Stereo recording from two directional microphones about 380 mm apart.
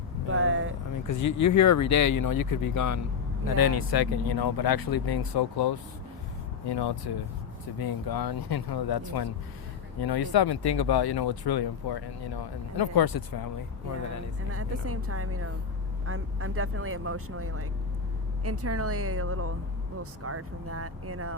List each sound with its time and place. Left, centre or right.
0.3 s vehicle: right
1.0 s speech: left
3.6 s speech: left
7.8 s speech: left
14.5 s speech: right